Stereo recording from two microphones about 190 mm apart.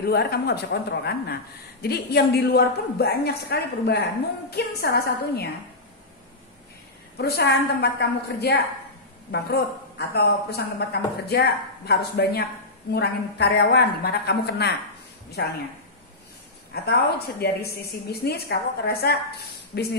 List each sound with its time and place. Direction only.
0.0 s a woman's voice: 55° left (ahead or behind)
7.2 s a woman's voice: 55° left (ahead or behind)
17.4 s a woman's voice: 60° left (ahead or behind)